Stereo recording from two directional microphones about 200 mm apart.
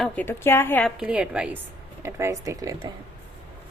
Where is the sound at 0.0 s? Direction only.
10° left (ahead or behind); by 2.9 s 15° right (ahead or behind).